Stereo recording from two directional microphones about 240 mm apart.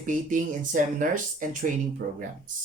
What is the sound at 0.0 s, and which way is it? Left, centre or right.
Speech, right.